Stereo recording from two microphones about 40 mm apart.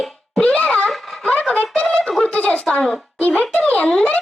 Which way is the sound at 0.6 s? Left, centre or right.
Left.